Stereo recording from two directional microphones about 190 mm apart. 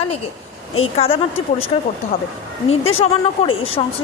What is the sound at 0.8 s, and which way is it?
A woman's voice, 30° left (ahead or behind).